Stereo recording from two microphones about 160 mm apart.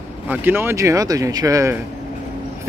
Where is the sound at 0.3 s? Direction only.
10° right (ahead or behind).